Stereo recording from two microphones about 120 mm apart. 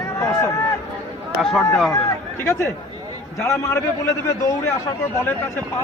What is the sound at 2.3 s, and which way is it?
A man's voice, 20° left (ahead or behind).